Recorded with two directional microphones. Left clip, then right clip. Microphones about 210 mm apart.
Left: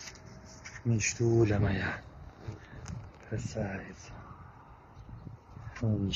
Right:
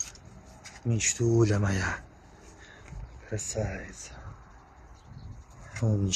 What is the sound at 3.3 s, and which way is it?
Speech, 45° right (ahead or behind).